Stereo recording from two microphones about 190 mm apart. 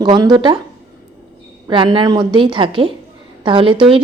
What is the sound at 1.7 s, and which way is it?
A woman's voice, 25° right (ahead or behind).